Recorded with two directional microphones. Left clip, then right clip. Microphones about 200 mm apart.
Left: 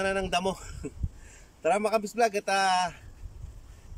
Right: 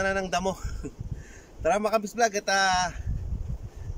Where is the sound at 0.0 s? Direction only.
5° left (ahead or behind).